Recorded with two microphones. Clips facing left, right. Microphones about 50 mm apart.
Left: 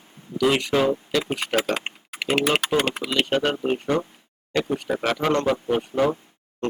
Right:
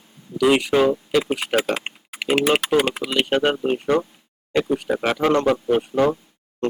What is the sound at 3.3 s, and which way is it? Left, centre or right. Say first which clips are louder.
Speech: right 4 dB; centre.